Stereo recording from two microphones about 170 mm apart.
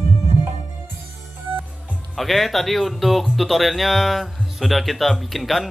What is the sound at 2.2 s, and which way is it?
Speech, centre (ahead or behind).